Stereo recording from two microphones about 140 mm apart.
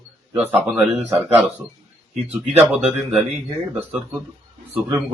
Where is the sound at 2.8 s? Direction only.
50° right (ahead or behind).